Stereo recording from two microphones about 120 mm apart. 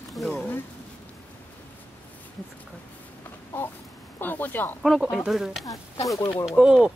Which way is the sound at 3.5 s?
15° left (ahead or behind).